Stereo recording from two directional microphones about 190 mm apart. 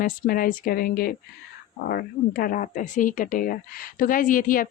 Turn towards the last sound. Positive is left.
turn(degrees=45)  # may be behind; listen again after turning